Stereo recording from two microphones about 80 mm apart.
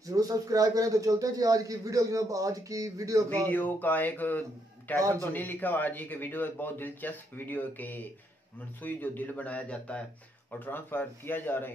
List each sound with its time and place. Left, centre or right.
0.0 s speech: right
3.4 s speech: left